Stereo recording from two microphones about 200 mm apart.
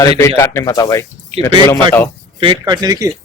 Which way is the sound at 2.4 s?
25° right (ahead or behind).